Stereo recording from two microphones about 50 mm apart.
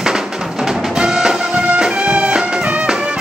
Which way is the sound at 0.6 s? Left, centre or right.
Centre.